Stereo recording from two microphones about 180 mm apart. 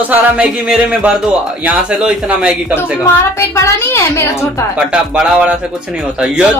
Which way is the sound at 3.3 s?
15° left (ahead or behind).